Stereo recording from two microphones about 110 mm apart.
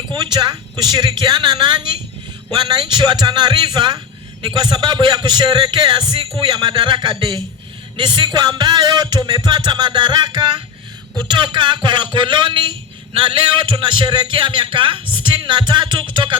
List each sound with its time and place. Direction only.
0.1 s a man's voice: 40° right (ahead or behind)